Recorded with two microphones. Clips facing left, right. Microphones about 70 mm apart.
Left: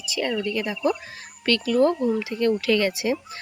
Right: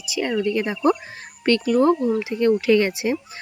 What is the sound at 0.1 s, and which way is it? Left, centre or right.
Speech, centre.